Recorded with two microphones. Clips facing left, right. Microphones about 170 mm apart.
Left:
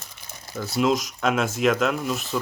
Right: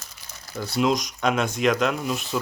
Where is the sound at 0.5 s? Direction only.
Centre (ahead or behind).